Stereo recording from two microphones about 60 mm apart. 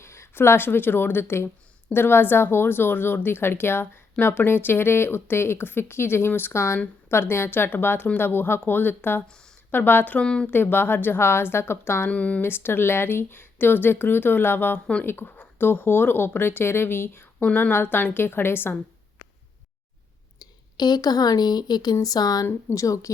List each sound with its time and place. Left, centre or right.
0.0 s speech: left
10.2 s speech: centre
10.5 s speech: left
12.0 s speech: left
12.4 s speech: left
17.4 s speech: left
22.0 s speech: left
22.7 s speech: left